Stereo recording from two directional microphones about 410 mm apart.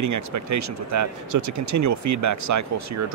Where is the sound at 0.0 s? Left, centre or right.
Right.